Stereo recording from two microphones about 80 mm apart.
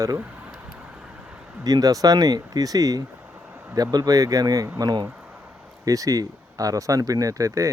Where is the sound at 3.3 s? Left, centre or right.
Centre.